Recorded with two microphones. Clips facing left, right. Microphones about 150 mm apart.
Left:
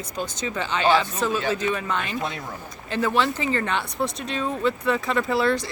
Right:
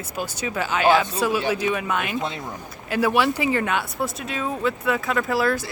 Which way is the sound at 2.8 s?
10° right (ahead or behind).